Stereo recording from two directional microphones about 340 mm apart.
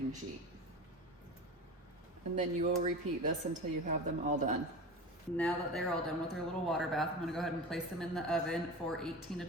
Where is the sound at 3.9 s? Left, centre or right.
Right.